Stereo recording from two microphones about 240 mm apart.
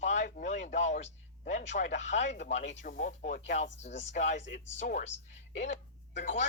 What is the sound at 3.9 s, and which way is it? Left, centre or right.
Speech, left.